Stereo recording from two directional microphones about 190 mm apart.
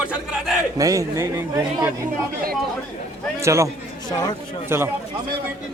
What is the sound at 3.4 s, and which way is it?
Speech, 15° right (ahead or behind).